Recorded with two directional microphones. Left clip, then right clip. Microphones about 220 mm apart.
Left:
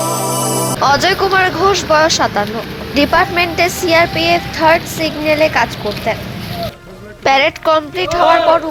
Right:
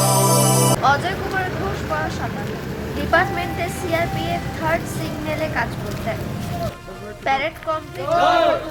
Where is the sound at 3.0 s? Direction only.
35° left (ahead or behind).